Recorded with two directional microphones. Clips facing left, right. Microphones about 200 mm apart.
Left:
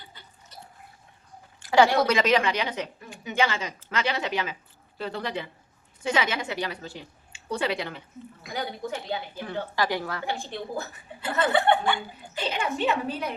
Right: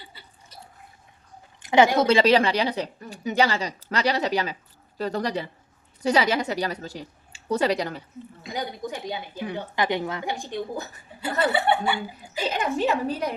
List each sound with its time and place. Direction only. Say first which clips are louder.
1.5 s a woman's voice: right 1 dB; 20° right (ahead or behind); by 8.0 s 40° right (ahead or behind)
8.4 s a woman's voice: right 1 dB; 15° right (ahead or behind)
12.5 s speech: right 3 dB; 40° right (ahead or behind)